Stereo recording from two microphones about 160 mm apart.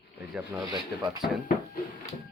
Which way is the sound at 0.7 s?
25° right (ahead or behind).